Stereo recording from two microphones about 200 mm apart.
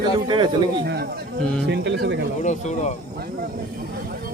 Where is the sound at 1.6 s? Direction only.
60° right (ahead or behind).